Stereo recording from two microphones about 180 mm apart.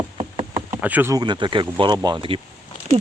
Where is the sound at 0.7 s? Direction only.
10° right (ahead or behind); by 2.3 s 25° right (ahead or behind).